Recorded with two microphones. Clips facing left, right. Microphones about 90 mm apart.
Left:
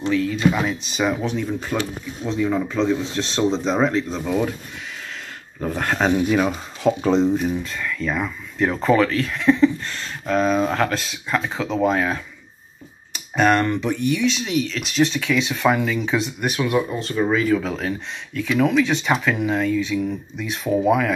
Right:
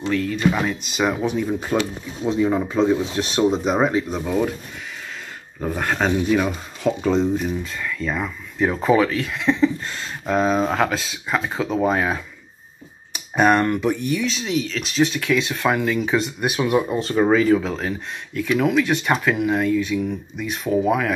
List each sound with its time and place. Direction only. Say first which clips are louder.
0.0 s speech: left 1 dB; centre (ahead or behind)
5.6 s speech: even; 10° right (ahead or behind)
5.9 s speech: left 1 dB; 5° left (ahead or behind)
13.4 s speech: right 1 dB; 10° right (ahead or behind)
16.5 s speech: right 2 dB; 20° right (ahead or behind)
17.0 s speech: right 3 dB; 40° right (ahead or behind)
17.6 s speech: even; centre (ahead or behind)